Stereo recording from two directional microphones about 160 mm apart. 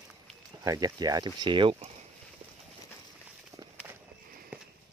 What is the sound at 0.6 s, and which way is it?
Speech, 25° right (ahead or behind).